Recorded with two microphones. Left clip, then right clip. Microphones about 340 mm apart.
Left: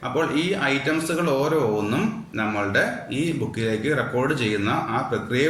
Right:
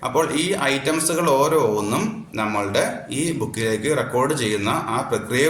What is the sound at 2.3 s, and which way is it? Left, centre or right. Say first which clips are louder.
Speech: right 1 dB; centre.